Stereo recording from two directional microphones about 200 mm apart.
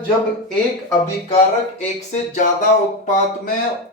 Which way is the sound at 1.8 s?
35° left (ahead or behind).